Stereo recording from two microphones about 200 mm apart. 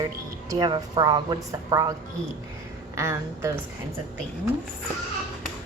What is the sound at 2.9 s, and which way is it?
Speech, 15° right (ahead or behind).